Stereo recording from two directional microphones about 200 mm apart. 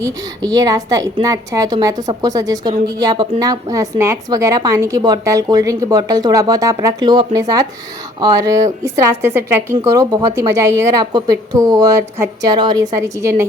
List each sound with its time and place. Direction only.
0.0 s a woman's voice: 15° right (ahead or behind)